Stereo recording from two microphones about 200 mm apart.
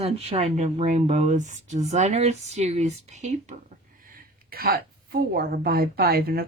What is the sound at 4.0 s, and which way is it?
A woman's voice, 45° right (ahead or behind).